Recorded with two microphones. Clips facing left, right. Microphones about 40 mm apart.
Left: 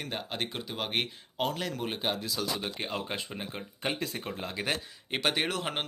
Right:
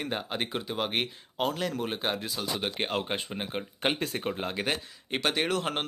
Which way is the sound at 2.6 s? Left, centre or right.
Right.